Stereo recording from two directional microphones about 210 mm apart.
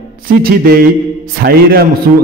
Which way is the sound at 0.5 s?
45° right (ahead or behind).